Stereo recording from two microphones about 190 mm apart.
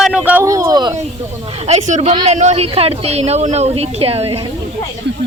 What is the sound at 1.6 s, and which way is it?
Speech, 35° right (ahead or behind).